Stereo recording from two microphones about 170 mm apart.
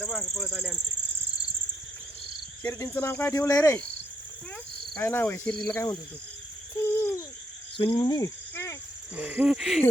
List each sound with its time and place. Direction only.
0.0 s speech: centre (ahead or behind)
2.6 s cricket: 15° left (ahead or behind)
4.9 s cricket: 10° left (ahead or behind)
6.8 s owl: 15° left (ahead or behind)
7.9 s speech: 20° left (ahead or behind)
9.1 s owl: 10° right (ahead or behind)